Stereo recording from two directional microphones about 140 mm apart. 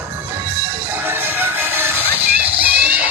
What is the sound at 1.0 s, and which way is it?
Music, 15° right (ahead or behind).